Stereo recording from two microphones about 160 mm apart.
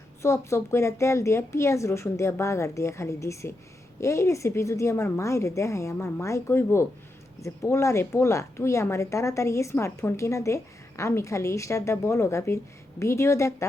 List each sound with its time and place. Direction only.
0.2 s a woman's voice: 15° left (ahead or behind)